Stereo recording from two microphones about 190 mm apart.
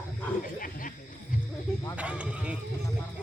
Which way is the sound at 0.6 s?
45° left (ahead or behind).